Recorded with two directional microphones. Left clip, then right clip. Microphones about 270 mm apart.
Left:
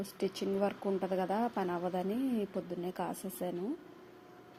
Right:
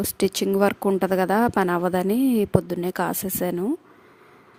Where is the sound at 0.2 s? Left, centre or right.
Right.